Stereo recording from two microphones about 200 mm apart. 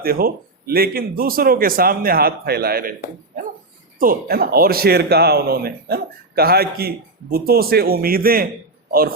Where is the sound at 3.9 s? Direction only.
45° right (ahead or behind).